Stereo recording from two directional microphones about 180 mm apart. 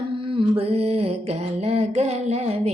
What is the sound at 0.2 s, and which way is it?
Mantra, 30° right (ahead or behind).